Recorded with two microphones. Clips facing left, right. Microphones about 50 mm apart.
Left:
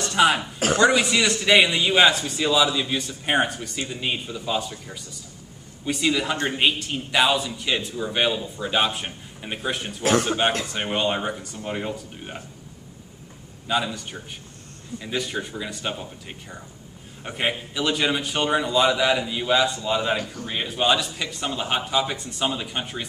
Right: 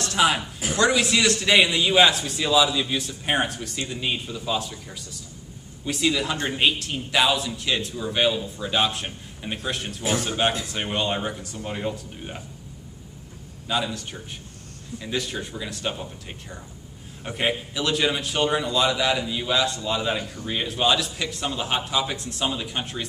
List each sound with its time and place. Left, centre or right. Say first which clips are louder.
0.0 s a sound: left 2 dB; centre
0.7 s a man's voice: left 1 dB; centre
13.7 s a man's voice: left 2 dB; centre